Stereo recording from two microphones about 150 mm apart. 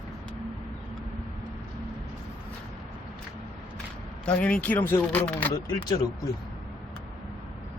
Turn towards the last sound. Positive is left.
turn(degrees=25)  # may be behind; listen again after turning